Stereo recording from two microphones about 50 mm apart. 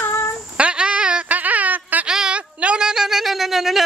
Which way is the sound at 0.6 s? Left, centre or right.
Right.